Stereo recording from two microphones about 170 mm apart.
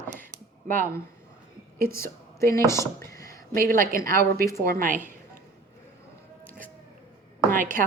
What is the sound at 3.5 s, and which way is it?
A woman's voice, 55° right (ahead or behind).